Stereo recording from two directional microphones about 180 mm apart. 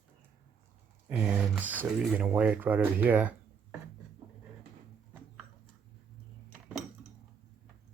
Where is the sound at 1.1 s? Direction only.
10° right (ahead or behind).